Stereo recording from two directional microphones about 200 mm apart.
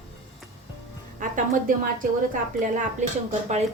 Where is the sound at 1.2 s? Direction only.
40° right (ahead or behind).